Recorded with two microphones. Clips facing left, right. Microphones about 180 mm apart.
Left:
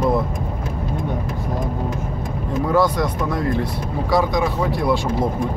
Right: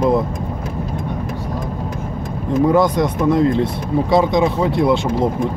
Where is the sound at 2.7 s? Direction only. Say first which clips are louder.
Right 1 dB; 20° right (ahead or behind).